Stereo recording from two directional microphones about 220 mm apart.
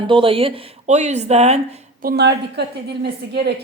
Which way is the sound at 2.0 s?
50° right (ahead or behind).